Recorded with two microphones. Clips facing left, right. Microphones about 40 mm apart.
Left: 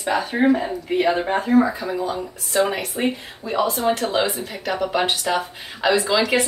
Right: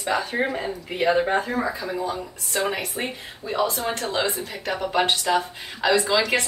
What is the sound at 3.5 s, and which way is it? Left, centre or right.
Speech, left.